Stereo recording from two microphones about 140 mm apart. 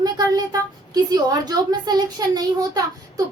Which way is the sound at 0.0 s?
25° right (ahead or behind).